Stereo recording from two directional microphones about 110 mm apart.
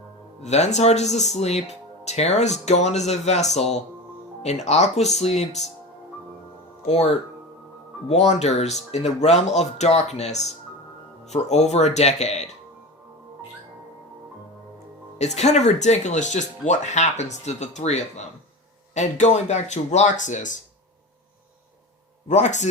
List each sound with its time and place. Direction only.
0.4 s speech: 90° left
6.8 s speech: 80° left
15.2 s speech: 90° left
22.3 s speech: 90° left